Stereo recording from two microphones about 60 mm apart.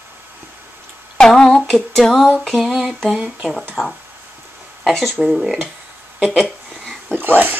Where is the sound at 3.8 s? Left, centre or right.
Left.